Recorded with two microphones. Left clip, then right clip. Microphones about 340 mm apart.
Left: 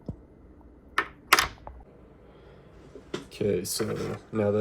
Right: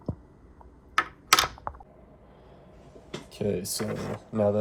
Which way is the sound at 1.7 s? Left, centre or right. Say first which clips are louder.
Right 9 dB; left.